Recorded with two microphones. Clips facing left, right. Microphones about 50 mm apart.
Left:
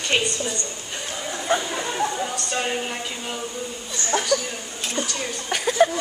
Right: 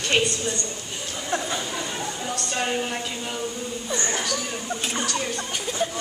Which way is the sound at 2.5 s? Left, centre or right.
Centre.